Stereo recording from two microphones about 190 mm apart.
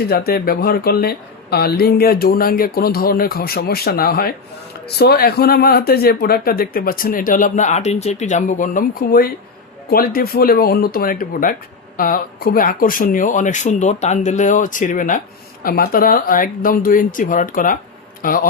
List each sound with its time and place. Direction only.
0.1 s speech: 50° left (ahead or behind)